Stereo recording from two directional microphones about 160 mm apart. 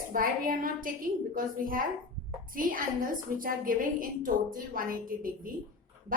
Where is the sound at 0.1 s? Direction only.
60° right (ahead or behind).